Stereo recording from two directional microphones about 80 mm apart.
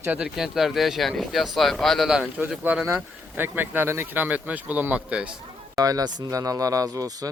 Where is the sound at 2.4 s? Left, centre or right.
Centre.